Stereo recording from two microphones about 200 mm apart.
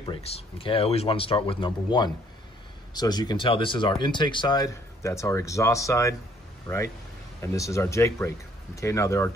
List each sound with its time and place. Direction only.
0.0 s speech: 30° left (ahead or behind); by 9.3 s 15° left (ahead or behind)